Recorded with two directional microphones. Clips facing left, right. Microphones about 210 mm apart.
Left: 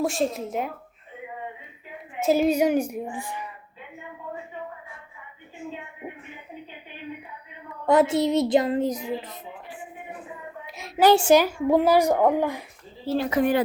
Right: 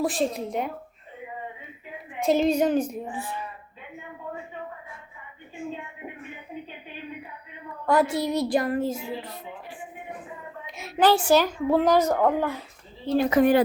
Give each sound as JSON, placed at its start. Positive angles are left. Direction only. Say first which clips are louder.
{"t": 0.0, "sound": "speech", "louder": "even", "side_deg": 0}
{"t": 2.1, "sound": "a woman's voice", "louder": "left 1 dB", "side_deg": 5}
{"t": 7.9, "sound": "a woman's voice", "louder": "left 3 dB", "side_deg": 20}
{"t": 10.7, "sound": "a sound", "louder": "right 1 dB", "side_deg": 0}
{"t": 11.1, "sound": "a woman's voice", "louder": "left 5 dB", "side_deg": 25}
{"t": 11.3, "sound": "a woman's voice", "louder": "left 2 dB", "side_deg": 10}
{"t": 13.3, "sound": "speech", "louder": "right 3 dB", "side_deg": -40}